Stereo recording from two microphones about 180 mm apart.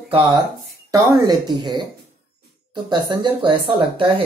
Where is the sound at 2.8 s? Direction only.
25° right (ahead or behind).